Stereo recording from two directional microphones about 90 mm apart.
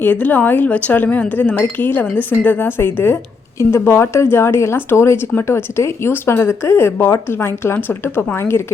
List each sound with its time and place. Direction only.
0.0 s a woman's voice: 20° left (ahead or behind)